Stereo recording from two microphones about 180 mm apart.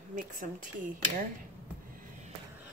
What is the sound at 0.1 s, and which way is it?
Speech, 45° right (ahead or behind).